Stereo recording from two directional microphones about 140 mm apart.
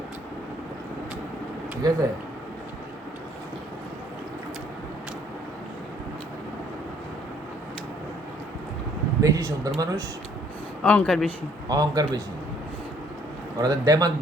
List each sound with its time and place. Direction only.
1.8 s speech: 25° right (ahead or behind)
9.2 s speech: 25° right (ahead or behind)
10.8 s speech: 5° left (ahead or behind)
11.7 s speech: 30° right (ahead or behind)
13.6 s speech: 25° right (ahead or behind)